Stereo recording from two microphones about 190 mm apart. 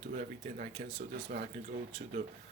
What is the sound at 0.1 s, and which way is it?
A man's voice, 45° right (ahead or behind).